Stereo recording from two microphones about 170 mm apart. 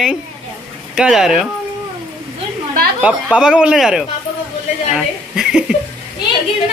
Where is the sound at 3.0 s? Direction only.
5° right (ahead or behind).